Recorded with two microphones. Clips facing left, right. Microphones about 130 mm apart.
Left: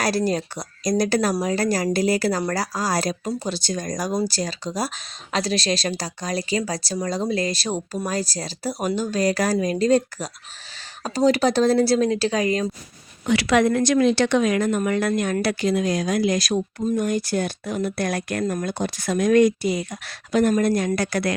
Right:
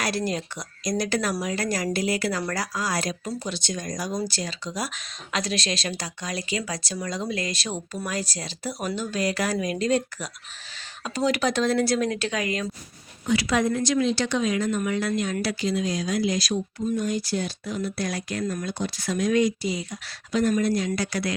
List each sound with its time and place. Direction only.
0.0 s speech: 35° left (ahead or behind)
13.2 s speech: 75° left (ahead or behind); by 21.3 s 55° left (ahead or behind)